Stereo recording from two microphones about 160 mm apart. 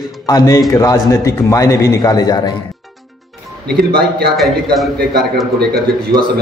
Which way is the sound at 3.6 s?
85° right.